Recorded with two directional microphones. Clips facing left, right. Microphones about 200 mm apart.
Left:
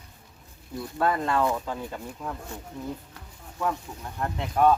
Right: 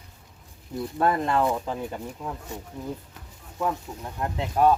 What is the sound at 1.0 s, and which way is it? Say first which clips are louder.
Speech: right 1 dB; 20° right (ahead or behind).